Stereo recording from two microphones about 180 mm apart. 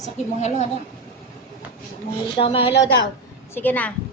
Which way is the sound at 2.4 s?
30° left (ahead or behind).